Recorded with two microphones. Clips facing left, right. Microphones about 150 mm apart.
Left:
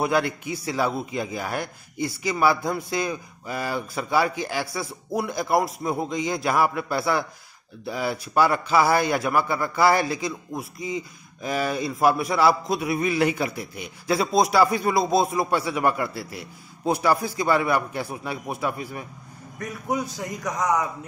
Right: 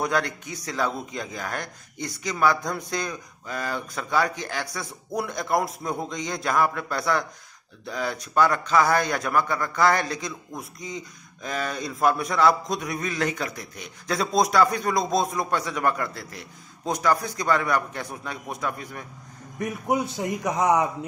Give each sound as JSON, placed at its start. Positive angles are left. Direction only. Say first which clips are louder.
{"t": 0.0, "sound": "a man's voice", "louder": "left 3 dB", "side_deg": 10}
{"t": 19.6, "sound": "a man's voice", "louder": "right 2 dB", "side_deg": -20}